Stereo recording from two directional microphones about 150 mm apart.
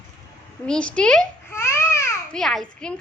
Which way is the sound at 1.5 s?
20° left (ahead or behind).